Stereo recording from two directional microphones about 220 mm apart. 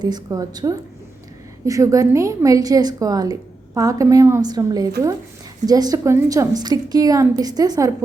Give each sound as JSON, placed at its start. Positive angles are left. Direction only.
{"t": 0.0, "sound": "a woman's voice", "side_deg": -15}